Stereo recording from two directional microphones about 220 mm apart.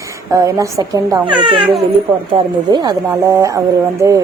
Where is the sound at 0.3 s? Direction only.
15° right (ahead or behind).